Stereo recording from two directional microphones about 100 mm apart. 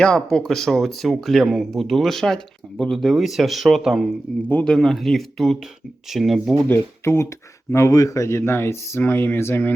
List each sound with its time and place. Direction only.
0.0 s speech: 5° left (ahead or behind)
6.7 s speech: 25° left (ahead or behind)